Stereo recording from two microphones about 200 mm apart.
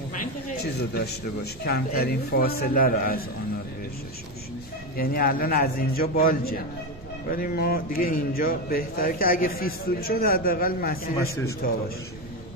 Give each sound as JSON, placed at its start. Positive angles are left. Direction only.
{"t": 0.9, "sound": "a man's voice", "side_deg": 50}
{"t": 4.9, "sound": "a man's voice", "side_deg": 45}